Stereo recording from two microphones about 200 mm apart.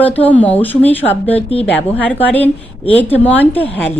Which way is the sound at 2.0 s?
10° left (ahead or behind).